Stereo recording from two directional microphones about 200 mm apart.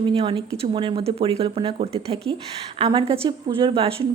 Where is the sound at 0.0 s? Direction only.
25° right (ahead or behind).